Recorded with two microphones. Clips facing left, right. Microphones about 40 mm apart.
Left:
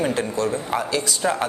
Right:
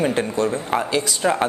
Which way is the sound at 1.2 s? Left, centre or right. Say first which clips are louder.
Right 3 dB; centre.